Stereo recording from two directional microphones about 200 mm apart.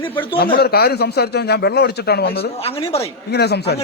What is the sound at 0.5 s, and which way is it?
A man's voice, 50° left (ahead or behind).